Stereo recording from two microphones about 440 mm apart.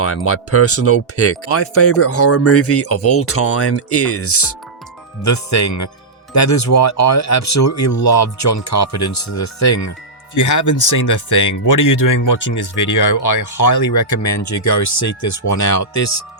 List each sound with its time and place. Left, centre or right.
0.0 s speech: left